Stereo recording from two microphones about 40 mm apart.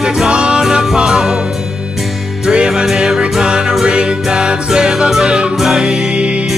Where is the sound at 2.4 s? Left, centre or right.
Centre.